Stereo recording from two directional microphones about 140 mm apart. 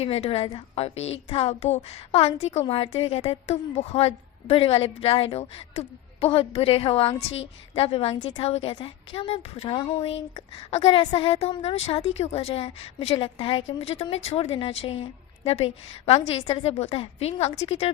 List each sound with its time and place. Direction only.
0.0 s a woman's voice: 45° left (ahead or behind)